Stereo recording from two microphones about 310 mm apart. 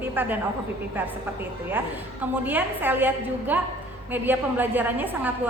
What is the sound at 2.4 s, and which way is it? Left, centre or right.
A woman's voice, centre.